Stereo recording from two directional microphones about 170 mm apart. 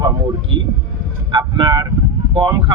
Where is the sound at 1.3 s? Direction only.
25° right (ahead or behind).